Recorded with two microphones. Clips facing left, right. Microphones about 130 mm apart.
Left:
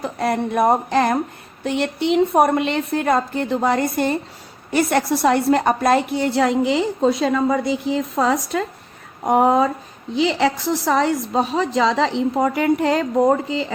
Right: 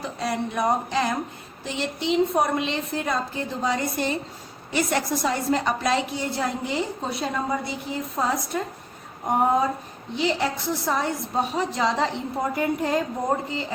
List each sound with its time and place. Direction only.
0.0 s a woman's voice: 55° left (ahead or behind); by 13.7 s 90° left